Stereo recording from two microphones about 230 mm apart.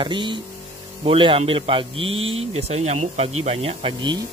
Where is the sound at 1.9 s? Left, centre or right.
Right.